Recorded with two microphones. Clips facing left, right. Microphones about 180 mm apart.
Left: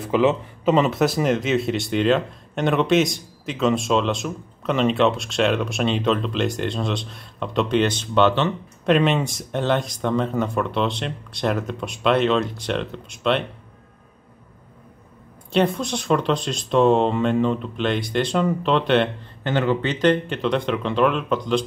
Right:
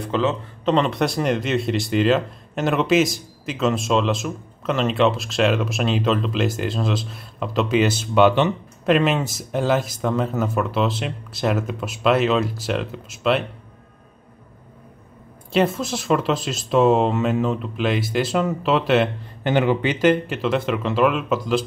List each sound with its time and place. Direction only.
0.0 s speech: 10° left (ahead or behind); by 8.5 s 15° right (ahead or behind)
8.8 s speech: centre (ahead or behind)
15.5 s speech: centre (ahead or behind)
19.5 s speech: 15° right (ahead or behind)